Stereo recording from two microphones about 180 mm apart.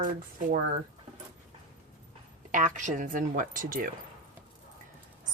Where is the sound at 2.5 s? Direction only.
45° right (ahead or behind).